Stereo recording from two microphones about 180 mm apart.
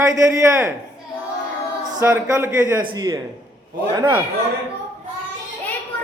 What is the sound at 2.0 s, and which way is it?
A man's voice, 15° right (ahead or behind).